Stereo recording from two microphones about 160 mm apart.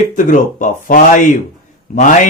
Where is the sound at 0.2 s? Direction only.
55° left (ahead or behind).